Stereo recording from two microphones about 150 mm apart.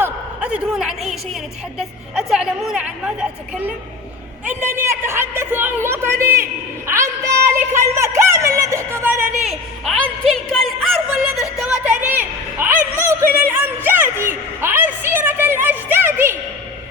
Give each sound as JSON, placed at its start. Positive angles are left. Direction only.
{"t": 0.0, "sound": "a woman's voice", "side_deg": -5}
{"t": 9.4, "sound": "a woman's voice", "side_deg": 0}
{"t": 11.5, "sound": "a sound", "side_deg": -5}